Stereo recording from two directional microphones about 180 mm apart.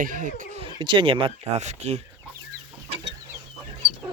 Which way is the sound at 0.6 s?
25° right (ahead or behind).